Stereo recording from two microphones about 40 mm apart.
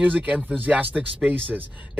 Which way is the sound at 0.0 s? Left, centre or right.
Right.